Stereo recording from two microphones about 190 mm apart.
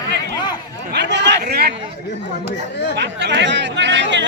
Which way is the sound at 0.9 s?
65° right (ahead or behind).